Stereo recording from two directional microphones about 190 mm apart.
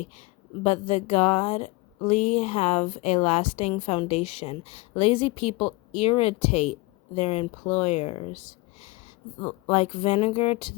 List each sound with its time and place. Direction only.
0.0 s a woman's voice: 35° left (ahead or behind)
9.6 s a woman's voice: 35° left (ahead or behind)